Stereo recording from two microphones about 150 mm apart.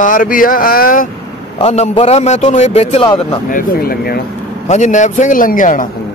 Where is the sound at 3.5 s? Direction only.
80° left.